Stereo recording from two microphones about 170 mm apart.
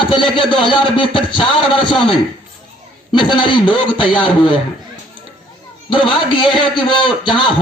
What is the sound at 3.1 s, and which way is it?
Speech, 30° left (ahead or behind).